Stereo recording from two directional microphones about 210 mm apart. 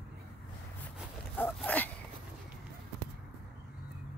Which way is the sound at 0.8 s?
10° left (ahead or behind).